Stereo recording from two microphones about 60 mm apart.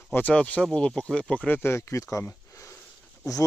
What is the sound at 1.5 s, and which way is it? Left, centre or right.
Speech, left.